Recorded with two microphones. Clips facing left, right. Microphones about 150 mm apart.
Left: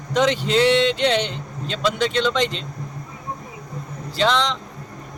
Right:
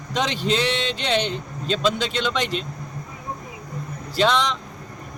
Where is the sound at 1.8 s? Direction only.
15° right (ahead or behind).